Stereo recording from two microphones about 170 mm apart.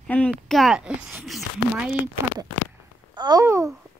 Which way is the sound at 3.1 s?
25° right (ahead or behind).